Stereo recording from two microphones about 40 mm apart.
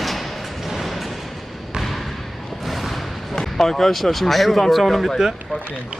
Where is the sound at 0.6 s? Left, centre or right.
Centre.